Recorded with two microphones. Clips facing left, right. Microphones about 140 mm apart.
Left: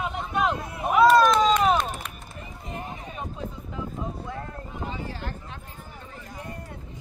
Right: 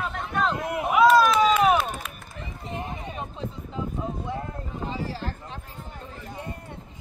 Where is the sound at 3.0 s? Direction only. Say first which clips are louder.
Right 1 dB; 25° right (ahead or behind).